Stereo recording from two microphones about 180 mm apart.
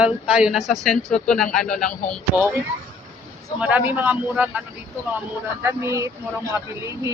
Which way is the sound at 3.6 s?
10° right (ahead or behind).